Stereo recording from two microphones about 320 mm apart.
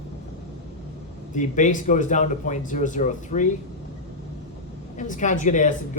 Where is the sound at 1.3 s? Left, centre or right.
Left.